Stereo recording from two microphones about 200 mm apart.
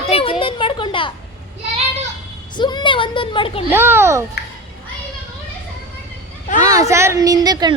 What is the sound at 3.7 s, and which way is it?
Speech, 10° right (ahead or behind).